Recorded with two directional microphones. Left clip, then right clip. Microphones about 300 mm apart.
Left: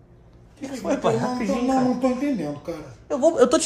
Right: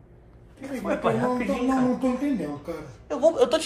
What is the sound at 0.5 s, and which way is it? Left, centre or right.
Speech, left.